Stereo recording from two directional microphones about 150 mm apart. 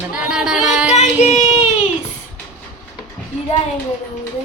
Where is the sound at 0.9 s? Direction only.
50° left (ahead or behind).